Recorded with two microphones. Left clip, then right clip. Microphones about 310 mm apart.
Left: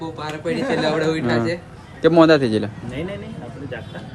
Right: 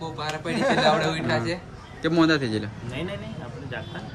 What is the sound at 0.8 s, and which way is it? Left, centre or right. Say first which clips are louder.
Speech: left 2 dB; centre.